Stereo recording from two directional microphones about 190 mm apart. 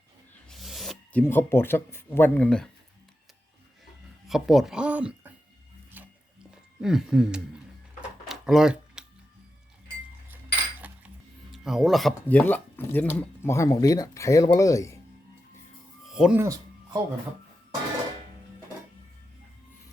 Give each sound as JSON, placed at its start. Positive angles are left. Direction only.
{"t": 0.5, "sound": "a sound", "side_deg": 0}
{"t": 1.2, "sound": "speech", "side_deg": 10}
{"t": 4.3, "sound": "speech", "side_deg": 0}
{"t": 6.8, "sound": "speech", "side_deg": -5}
{"t": 8.3, "sound": "a sound", "side_deg": 0}
{"t": 10.2, "sound": "cutlery", "side_deg": -10}
{"t": 11.5, "sound": "speech", "side_deg": 0}
{"t": 16.0, "sound": "music", "side_deg": -5}
{"t": 16.4, "sound": "music", "side_deg": -20}